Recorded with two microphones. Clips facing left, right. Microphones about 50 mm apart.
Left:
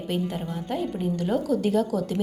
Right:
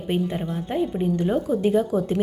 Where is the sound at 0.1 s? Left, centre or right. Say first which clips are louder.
Right 4 dB; right.